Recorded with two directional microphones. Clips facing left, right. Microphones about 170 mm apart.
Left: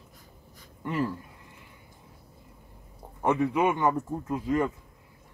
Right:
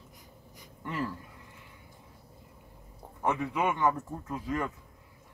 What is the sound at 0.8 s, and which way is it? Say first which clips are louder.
Speech: left 5 dB; 15° left (ahead or behind).